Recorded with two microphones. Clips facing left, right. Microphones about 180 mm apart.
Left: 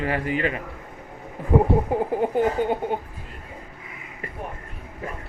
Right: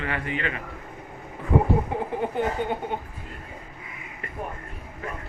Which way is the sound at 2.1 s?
40° left (ahead or behind).